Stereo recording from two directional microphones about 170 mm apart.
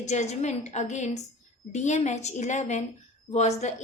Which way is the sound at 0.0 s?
40° left (ahead or behind).